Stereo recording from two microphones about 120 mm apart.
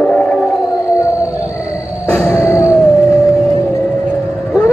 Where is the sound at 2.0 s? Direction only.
15° left (ahead or behind).